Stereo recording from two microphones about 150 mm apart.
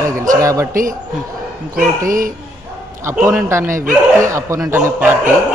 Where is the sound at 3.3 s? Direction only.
20° right (ahead or behind).